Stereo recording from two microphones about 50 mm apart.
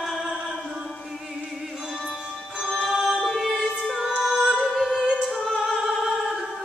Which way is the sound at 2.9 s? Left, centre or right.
Centre.